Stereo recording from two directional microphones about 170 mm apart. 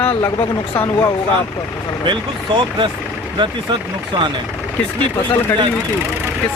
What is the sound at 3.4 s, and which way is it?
Speech, 30° right (ahead or behind).